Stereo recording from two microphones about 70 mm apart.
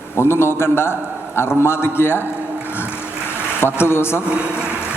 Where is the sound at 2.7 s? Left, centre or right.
Left.